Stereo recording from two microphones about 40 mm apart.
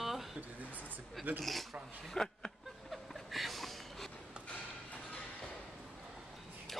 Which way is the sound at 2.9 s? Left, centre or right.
Centre.